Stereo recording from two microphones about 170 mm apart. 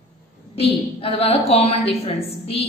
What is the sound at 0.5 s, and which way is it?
A woman's voice, 35° left (ahead or behind).